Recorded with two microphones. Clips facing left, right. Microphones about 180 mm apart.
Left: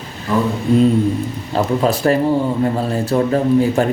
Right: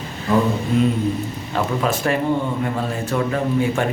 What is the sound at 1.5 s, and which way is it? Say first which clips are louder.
A man's voice: left 5 dB; 35° left (ahead or behind).